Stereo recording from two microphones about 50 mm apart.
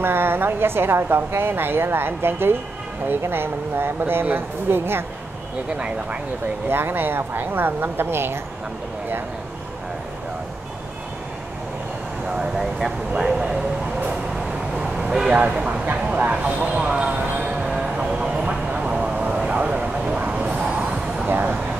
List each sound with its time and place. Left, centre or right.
0.0 s a woman's voice: right
6.7 s a woman's voice: right
12.3 s speech: centre
13.1 s vehicle: centre
18.9 s a sound: centre
21.3 s a sound: right